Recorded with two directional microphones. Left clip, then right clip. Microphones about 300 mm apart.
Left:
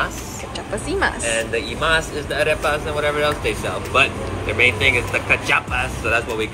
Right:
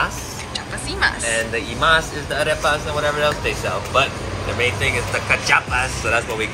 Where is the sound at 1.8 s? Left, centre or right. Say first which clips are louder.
Right 4 dB; centre.